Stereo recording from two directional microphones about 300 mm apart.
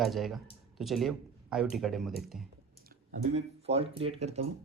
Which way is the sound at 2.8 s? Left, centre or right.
Right.